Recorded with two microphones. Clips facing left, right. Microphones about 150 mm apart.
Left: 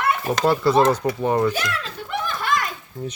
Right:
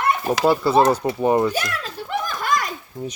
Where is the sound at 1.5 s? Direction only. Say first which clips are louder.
Right 1 dB; 40° right (ahead or behind).